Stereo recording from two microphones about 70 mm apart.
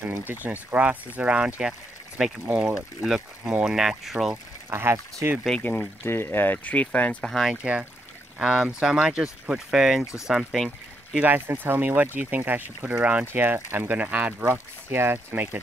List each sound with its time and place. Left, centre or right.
0.2 s speech: right; by 4.4 s centre
4.6 s speech: right
5.6 s speech: left
7.2 s speech: centre
8.4 s speech: centre
11.1 s speech: right
13.2 s speech: right